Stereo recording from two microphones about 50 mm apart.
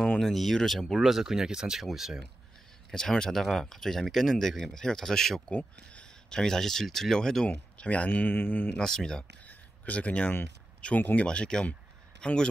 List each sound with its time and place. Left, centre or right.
0.2 s speech: centre
0.9 s speech: centre
2.9 s speech: centre
5.5 s speech: left
6.3 s speech: centre
7.4 s speech: left
8.7 s speech: centre
9.5 s a sound: left
11.0 s speech: left
11.2 s speech: centre